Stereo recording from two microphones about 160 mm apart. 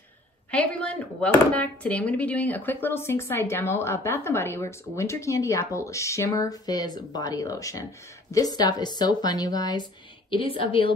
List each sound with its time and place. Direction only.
0.5 s speech: 10° left (ahead or behind); by 9.8 s 25° left (ahead or behind)
10.3 s a woman's voice: 35° left (ahead or behind)